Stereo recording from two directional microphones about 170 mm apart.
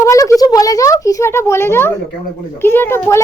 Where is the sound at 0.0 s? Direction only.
20° left (ahead or behind).